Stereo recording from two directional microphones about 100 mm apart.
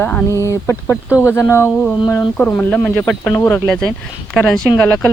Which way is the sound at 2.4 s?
15° left (ahead or behind).